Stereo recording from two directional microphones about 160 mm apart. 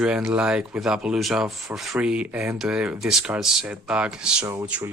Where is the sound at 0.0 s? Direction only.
5° right (ahead or behind).